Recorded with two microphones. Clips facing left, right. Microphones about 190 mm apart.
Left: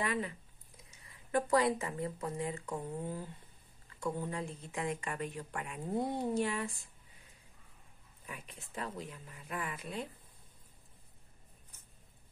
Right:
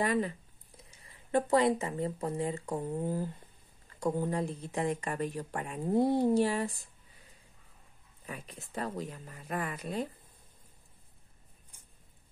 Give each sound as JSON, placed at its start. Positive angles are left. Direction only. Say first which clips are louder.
{"t": 0.0, "sound": "speech", "louder": "right 6 dB", "side_deg": -40}
{"t": 8.3, "sound": "speech", "louder": "right 5 dB", "side_deg": -35}